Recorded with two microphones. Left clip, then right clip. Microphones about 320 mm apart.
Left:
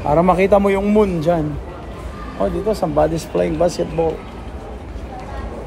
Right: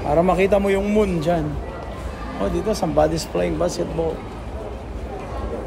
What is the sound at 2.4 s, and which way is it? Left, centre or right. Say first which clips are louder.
Speech: left 4 dB; centre.